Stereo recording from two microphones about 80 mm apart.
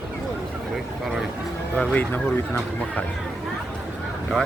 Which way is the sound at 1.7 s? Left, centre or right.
Centre.